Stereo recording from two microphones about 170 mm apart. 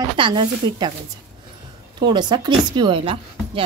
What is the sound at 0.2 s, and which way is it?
Speech, 25° right (ahead or behind).